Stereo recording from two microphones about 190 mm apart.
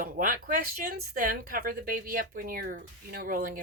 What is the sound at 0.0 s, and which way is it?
Speech, 45° right (ahead or behind).